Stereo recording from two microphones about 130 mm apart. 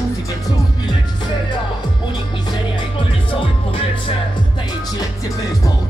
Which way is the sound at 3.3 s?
40° left (ahead or behind).